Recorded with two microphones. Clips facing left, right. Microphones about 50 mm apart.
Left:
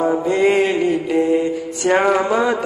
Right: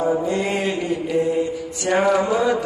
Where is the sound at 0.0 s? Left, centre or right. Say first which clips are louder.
Left 5 dB; left.